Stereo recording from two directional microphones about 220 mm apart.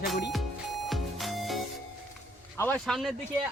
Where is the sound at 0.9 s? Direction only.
Centre (ahead or behind).